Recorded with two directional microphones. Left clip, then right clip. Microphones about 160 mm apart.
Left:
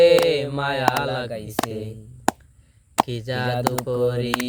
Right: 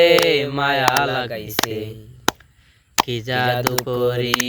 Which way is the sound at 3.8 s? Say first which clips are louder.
Right 2 dB; 25° right (ahead or behind).